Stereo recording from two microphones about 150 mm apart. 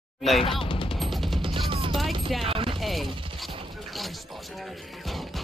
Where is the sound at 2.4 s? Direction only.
35° right (ahead or behind).